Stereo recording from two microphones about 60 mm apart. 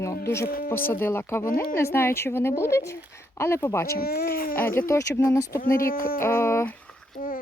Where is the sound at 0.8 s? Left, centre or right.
Left.